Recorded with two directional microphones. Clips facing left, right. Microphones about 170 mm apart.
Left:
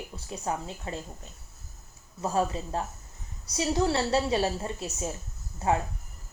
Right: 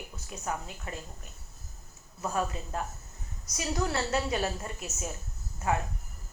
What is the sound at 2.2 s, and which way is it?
A woman's voice, 30° left (ahead or behind).